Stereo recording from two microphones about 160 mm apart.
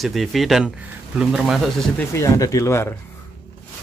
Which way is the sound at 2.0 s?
20° left (ahead or behind).